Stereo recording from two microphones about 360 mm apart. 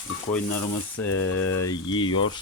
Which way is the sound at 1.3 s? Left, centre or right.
Left.